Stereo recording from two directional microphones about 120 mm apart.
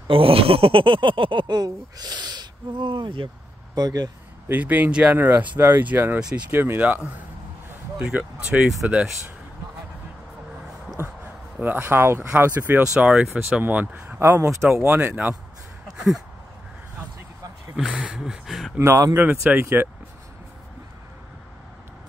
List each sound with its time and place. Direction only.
0.1 s speech: 50° right (ahead or behind)
3.7 s speech: 35° right (ahead or behind)
4.5 s speech: 15° right (ahead or behind)
11.6 s speech: 15° right (ahead or behind)
17.9 s speech: 5° right (ahead or behind)
18.8 s speech: 30° right (ahead or behind)
19.1 s speech: 15° right (ahead or behind)